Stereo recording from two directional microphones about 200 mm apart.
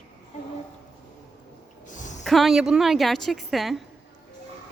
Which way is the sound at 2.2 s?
Centre (ahead or behind).